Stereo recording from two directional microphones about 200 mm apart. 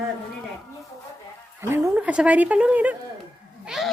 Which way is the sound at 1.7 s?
10° right (ahead or behind).